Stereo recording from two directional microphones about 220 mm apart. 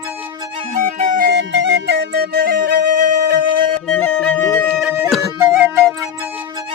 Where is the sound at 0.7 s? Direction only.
35° right (ahead or behind).